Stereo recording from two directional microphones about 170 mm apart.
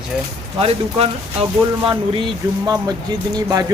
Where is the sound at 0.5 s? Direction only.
35° right (ahead or behind).